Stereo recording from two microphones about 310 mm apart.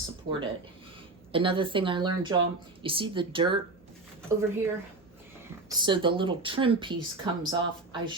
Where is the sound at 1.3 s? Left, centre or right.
Centre.